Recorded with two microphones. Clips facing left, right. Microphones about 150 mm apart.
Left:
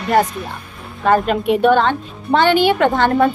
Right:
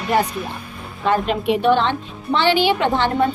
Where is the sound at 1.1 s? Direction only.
50° left (ahead or behind).